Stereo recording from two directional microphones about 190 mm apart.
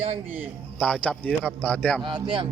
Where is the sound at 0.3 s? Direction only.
10° right (ahead or behind).